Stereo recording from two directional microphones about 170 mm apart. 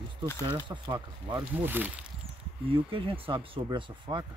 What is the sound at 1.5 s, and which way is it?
Speech, 10° right (ahead or behind).